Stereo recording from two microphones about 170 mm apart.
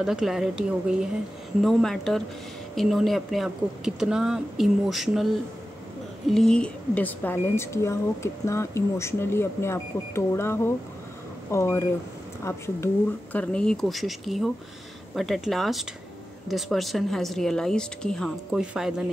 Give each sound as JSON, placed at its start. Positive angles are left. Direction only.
{"t": 0.0, "sound": "speech", "side_deg": -5}
{"t": 6.3, "sound": "speech", "side_deg": 5}